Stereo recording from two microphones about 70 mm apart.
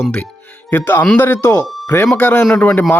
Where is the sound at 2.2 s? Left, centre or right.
Left.